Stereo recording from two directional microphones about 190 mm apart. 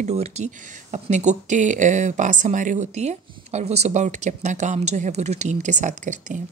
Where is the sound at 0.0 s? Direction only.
35° right (ahead or behind).